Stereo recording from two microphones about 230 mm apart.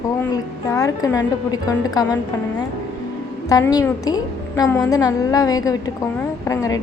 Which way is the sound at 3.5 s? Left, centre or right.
Centre.